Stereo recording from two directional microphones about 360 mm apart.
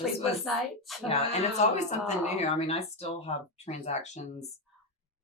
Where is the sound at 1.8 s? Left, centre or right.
Centre.